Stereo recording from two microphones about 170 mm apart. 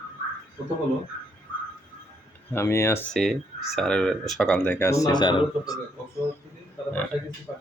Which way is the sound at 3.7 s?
5° left (ahead or behind).